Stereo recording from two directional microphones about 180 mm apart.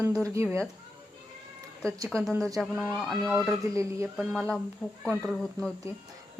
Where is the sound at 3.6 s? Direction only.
15° right (ahead or behind).